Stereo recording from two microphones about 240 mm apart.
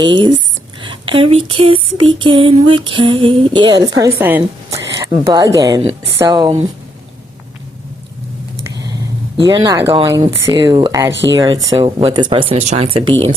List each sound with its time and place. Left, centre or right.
0.0 s female singing: centre
0.8 s speech: right
2.1 s female singing: right
4.9 s speech: centre
8.6 s a sound: centre
9.5 s speech: centre
11.1 s speech: right
11.4 s female singing: centre